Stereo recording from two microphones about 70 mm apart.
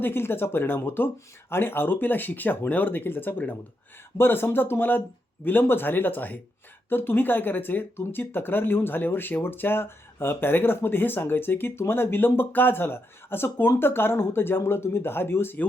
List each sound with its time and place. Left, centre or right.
0.0 s speech: left